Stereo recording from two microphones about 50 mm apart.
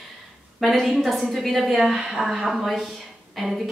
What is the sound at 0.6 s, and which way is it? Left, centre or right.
A woman's voice, centre.